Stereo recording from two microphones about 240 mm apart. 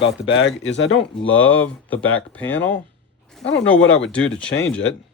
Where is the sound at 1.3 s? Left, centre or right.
Centre.